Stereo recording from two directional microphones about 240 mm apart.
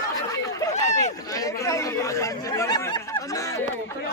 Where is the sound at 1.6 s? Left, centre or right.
Centre.